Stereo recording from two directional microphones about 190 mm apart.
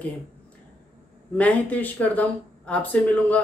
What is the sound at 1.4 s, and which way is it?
Speech, 10° left (ahead or behind).